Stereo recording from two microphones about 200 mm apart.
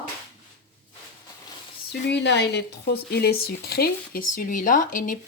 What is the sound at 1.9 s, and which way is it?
Speech, 60° left (ahead or behind).